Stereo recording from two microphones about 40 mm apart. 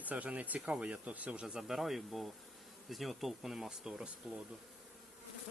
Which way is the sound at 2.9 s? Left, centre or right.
Centre.